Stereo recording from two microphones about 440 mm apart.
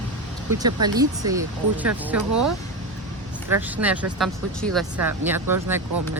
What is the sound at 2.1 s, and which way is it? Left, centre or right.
Speech, right.